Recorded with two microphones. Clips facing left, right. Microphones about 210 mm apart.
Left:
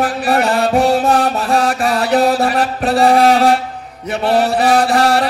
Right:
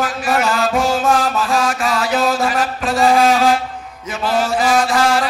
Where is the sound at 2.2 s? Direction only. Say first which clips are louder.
Left 4 dB; 35° left (ahead or behind).